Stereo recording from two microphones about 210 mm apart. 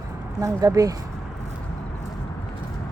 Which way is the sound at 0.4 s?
15° right (ahead or behind).